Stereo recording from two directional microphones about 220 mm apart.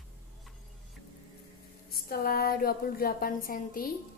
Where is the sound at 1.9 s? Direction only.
40° left (ahead or behind).